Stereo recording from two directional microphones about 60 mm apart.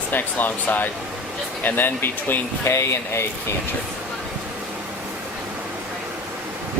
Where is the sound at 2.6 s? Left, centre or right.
Left.